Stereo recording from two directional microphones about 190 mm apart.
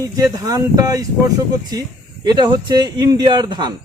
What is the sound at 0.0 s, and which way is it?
Speech, 20° right (ahead or behind).